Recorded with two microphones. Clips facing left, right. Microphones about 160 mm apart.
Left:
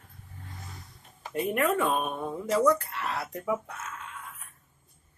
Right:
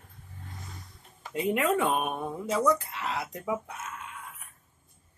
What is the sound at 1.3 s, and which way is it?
Speech, 15° right (ahead or behind).